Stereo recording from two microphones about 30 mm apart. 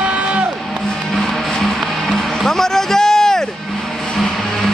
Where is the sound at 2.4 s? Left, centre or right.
Centre.